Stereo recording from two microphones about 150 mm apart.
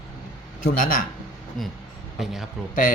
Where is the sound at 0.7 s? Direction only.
65° left (ahead or behind).